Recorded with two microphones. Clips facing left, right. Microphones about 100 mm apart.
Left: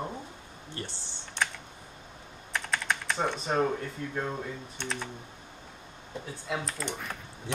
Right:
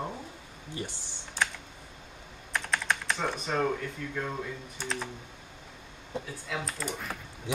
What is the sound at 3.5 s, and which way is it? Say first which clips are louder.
Speech: even; 30° left (ahead or behind).